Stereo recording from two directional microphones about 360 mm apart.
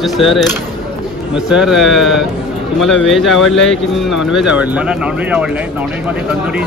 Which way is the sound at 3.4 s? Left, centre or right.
Left.